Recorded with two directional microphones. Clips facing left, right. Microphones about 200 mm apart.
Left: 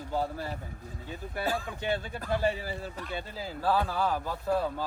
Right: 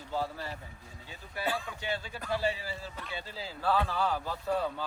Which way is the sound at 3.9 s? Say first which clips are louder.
Left 2 dB; 10° left (ahead or behind).